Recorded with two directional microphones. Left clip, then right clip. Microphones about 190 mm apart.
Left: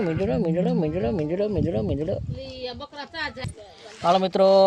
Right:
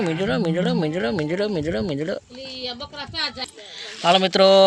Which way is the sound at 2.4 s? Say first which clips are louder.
Right 3 dB; 30° left (ahead or behind).